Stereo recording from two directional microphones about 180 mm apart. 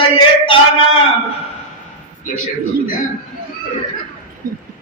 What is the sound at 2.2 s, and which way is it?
Speech, 50° left (ahead or behind).